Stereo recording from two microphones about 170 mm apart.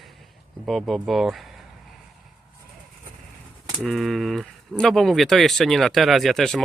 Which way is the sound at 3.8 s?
Centre (ahead or behind).